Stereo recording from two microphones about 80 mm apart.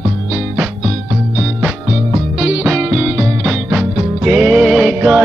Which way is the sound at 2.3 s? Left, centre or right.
Centre.